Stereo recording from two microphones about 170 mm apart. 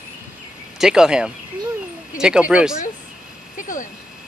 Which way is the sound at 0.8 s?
5° right (ahead or behind).